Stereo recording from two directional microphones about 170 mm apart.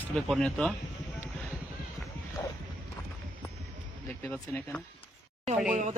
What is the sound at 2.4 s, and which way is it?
Bow-wow, 15° left (ahead or behind).